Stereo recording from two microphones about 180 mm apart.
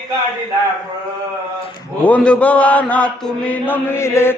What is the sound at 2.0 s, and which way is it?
Mantra, 5° left (ahead or behind).